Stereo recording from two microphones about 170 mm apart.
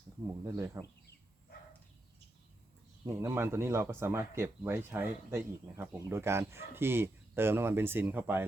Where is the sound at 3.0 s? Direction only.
15° right (ahead or behind).